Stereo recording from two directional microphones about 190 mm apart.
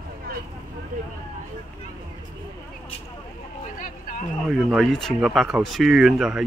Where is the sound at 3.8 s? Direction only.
45° left (ahead or behind).